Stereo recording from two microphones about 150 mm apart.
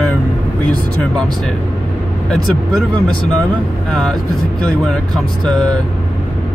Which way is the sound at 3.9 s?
5° left (ahead or behind).